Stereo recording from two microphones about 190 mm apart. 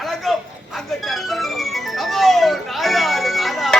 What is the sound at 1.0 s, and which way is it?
Music, centre (ahead or behind).